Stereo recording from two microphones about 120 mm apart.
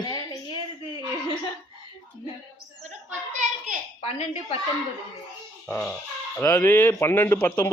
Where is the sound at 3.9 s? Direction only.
60° left (ahead or behind).